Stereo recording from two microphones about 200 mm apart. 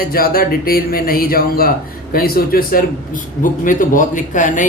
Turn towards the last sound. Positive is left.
turn(degrees=40)  # may be behind; listen again after turning